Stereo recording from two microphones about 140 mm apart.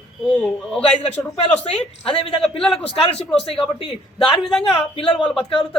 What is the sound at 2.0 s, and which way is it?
A woman's voice, 40° left (ahead or behind).